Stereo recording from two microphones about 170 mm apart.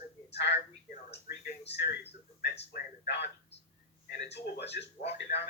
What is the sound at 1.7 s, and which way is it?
Speech, 75° left (ahead or behind).